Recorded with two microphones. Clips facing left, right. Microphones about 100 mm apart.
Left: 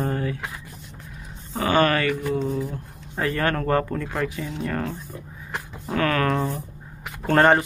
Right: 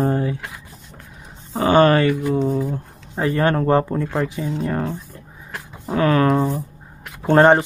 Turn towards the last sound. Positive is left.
turn(degrees=-20)  # may be behind; listen again after turning